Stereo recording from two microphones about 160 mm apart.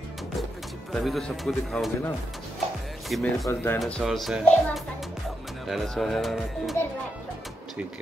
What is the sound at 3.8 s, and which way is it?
Speech, centre (ahead or behind).